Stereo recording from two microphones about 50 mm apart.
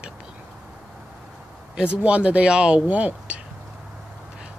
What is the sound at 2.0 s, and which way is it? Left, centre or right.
Speech, right.